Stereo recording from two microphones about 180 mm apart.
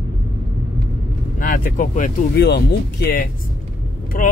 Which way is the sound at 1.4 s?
50° left (ahead or behind).